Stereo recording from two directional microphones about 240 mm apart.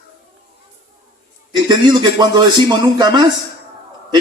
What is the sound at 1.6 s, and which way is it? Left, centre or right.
A man's voice, centre.